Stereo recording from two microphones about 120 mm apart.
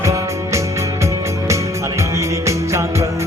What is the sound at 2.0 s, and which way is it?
Music, 25° right (ahead or behind).